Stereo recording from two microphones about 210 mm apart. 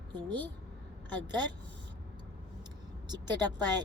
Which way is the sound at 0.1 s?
20° right (ahead or behind).